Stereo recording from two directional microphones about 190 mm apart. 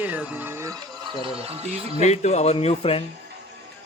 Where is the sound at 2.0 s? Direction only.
35° left (ahead or behind).